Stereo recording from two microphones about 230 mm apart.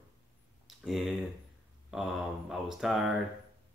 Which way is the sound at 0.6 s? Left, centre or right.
Centre.